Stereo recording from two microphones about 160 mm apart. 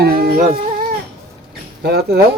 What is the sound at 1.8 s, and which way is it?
Speech, 90° right.